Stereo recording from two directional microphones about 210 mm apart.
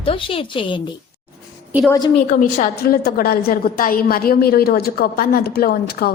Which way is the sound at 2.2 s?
40° left (ahead or behind).